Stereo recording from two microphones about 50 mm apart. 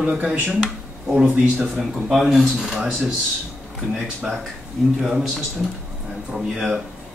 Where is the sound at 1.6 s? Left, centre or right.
Centre.